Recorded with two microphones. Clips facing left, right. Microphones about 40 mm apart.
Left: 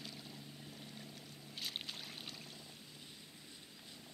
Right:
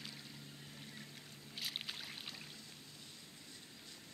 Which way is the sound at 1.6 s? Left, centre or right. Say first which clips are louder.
Right 1 dB; centre.